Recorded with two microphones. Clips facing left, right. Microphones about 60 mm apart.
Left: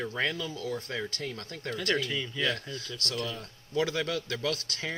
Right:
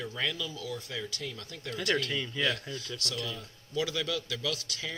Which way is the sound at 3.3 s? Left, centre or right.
Left.